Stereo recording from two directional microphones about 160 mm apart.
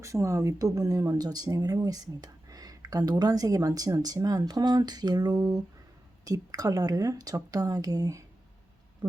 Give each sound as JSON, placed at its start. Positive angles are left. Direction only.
{"t": 0.0, "sound": "speech", "side_deg": -20}